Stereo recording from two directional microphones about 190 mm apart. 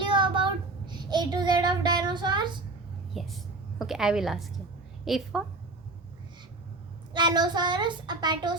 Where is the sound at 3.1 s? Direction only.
Centre (ahead or behind).